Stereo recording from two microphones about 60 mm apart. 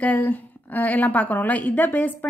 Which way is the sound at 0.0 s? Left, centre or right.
Left.